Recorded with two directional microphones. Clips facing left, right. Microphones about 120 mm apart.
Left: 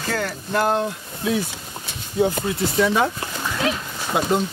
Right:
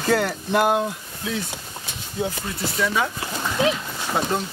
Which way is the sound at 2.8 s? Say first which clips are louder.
Left 4 dB; 30° left (ahead or behind).